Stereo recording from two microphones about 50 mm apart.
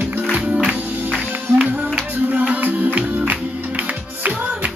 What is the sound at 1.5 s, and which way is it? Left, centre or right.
Music, right.